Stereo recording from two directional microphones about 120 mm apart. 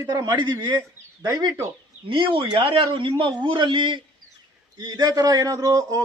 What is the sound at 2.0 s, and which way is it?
A man's voice, 45° right (ahead or behind).